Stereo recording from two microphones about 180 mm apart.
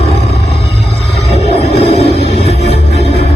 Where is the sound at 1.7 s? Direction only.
35° left (ahead or behind).